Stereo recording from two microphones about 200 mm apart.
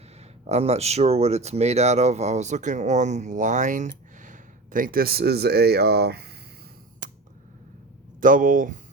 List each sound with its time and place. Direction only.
0.4 s speech: 35° right (ahead or behind); by 6.3 s 55° right (ahead or behind)
7.0 s a sound: 40° right (ahead or behind)
8.2 s speech: 40° right (ahead or behind)